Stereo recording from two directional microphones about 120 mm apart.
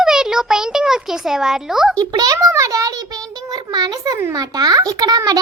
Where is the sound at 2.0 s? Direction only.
30° right (ahead or behind).